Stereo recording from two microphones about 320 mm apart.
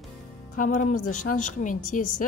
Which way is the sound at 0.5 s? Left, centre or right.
Left.